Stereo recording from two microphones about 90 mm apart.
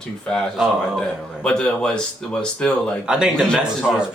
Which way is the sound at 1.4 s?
10° left (ahead or behind).